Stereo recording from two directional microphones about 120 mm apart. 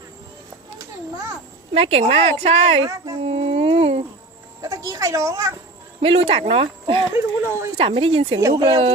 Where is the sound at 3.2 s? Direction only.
55° right (ahead or behind).